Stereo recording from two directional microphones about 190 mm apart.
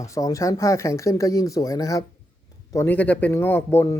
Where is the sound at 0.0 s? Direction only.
15° left (ahead or behind).